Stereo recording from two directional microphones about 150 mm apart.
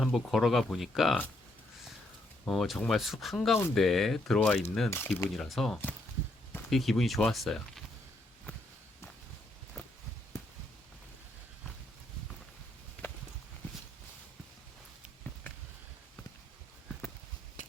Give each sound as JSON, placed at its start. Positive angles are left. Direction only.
{"t": 0.0, "sound": "speech", "side_deg": 0}
{"t": 2.4, "sound": "speech", "side_deg": 0}
{"t": 5.3, "sound": "speech", "side_deg": 0}
{"t": 17.6, "sound": "a sound", "side_deg": 55}